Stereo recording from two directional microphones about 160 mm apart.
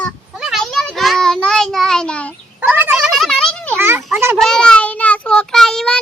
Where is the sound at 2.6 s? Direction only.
10° right (ahead or behind).